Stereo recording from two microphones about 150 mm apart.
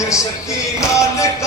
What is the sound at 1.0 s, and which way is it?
Music, 20° left (ahead or behind).